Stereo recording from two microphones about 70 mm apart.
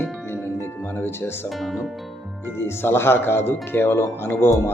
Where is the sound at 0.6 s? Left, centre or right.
Left.